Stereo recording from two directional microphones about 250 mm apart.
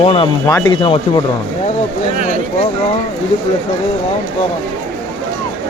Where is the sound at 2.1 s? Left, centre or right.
Right.